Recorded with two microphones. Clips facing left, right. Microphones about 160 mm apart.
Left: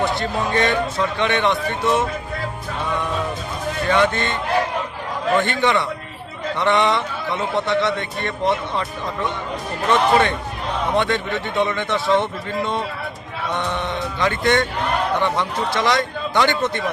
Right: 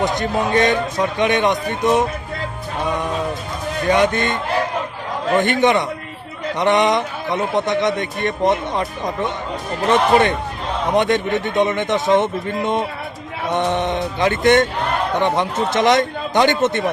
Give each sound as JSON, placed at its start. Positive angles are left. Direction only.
{"t": 0.0, "sound": "a man's voice", "side_deg": -20}
{"t": 3.8, "sound": "a man's voice", "side_deg": -15}
{"t": 9.9, "sound": "a man's voice", "side_deg": -20}